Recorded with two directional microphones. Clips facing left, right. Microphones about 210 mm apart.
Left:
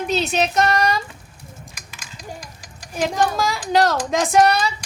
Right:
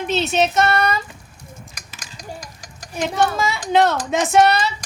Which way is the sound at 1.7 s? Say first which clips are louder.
Right 1 dB; 40° right (ahead or behind).